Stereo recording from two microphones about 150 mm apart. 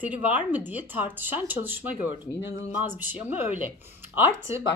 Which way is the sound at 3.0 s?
10° right (ahead or behind).